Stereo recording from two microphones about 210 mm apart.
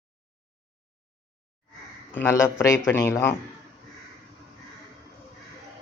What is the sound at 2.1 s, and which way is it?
Speech, 15° left (ahead or behind).